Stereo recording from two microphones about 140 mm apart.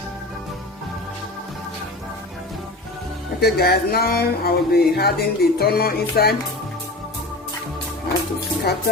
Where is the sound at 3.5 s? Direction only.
90° left.